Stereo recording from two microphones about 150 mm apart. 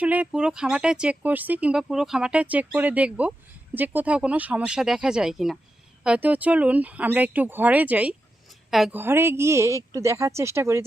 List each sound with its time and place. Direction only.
0.0 s a woman's voice: 10° right (ahead or behind)
9.0 s speech: 15° right (ahead or behind)